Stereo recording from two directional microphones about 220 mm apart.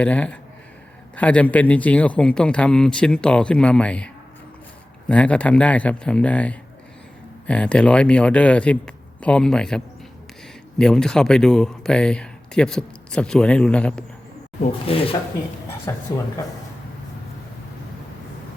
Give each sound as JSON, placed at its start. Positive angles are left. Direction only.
{"t": 0.0, "sound": "speech", "side_deg": 5}
{"t": 14.6, "sound": "speech", "side_deg": 25}
{"t": 15.9, "sound": "speech", "side_deg": 15}